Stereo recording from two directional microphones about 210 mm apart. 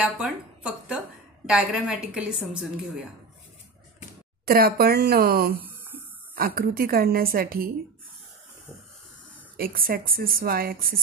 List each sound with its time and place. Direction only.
0.0 s a woman's voice: 5° right (ahead or behind)
4.5 s a woman's voice: 45° right (ahead or behind)
5.6 s a sound: 10° right (ahead or behind)
6.3 s a woman's voice: 45° right (ahead or behind)
9.6 s a woman's voice: 45° right (ahead or behind)